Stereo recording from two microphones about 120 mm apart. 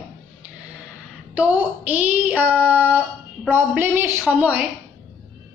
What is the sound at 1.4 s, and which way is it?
A woman's voice, 15° right (ahead or behind).